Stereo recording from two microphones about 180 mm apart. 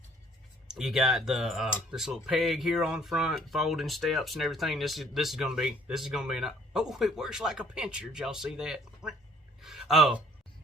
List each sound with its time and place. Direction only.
0.7 s speech: 5° right (ahead or behind)